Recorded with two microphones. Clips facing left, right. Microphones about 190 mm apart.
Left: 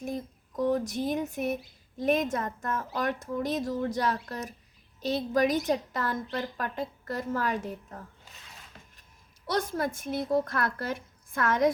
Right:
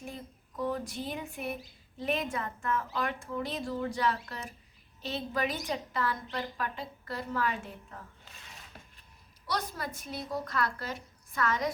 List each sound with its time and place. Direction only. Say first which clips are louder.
0.0 s a sound: left 8 dB; 45° left (ahead or behind)
2.0 s a woman's voice: left 6 dB; 45° left (ahead or behind)
9.5 s a woman's voice: left 6 dB; 50° left (ahead or behind)